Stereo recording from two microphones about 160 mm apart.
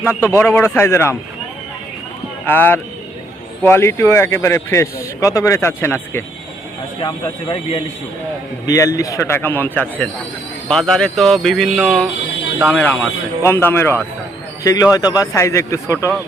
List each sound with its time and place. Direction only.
0.0 s speech: 15° left (ahead or behind)
2.5 s speech: 10° left (ahead or behind)
7.0 s speech: 30° left (ahead or behind)
8.6 s speech: 20° left (ahead or behind)